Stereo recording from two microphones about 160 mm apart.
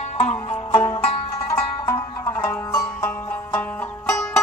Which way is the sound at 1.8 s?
20° left (ahead or behind).